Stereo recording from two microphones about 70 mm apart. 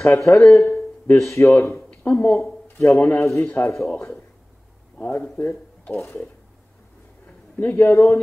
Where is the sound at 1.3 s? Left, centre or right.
Left.